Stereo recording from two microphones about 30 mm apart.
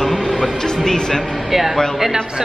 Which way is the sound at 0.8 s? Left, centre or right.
Left.